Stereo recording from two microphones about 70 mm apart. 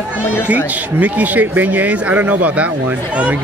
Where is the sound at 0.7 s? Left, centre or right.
Right.